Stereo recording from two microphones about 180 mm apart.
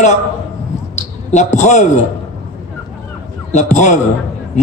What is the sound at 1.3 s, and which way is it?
Speech, 40° left (ahead or behind).